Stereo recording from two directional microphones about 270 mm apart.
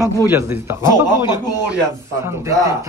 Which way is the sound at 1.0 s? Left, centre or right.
Centre.